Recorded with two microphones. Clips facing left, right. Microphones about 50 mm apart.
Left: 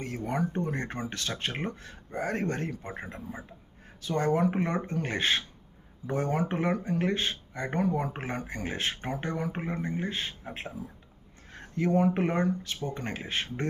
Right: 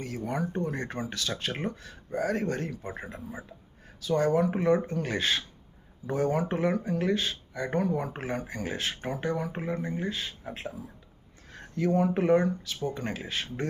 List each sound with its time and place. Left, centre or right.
0.0 s speech: left
4.0 s speech: left
11.5 s speech: left